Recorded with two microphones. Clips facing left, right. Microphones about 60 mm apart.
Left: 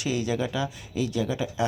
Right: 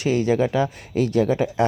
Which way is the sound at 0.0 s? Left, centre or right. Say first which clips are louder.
Right 8 dB; right.